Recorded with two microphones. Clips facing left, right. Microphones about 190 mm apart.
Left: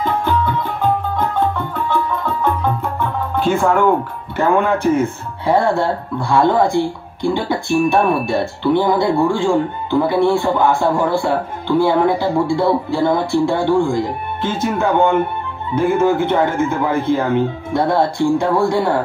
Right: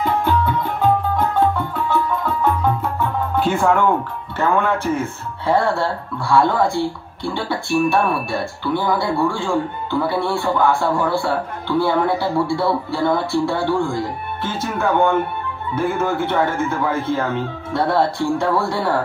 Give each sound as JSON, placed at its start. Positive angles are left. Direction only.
{"t": 3.3, "sound": "speech", "side_deg": 0}
{"t": 4.4, "sound": "speech", "side_deg": 15}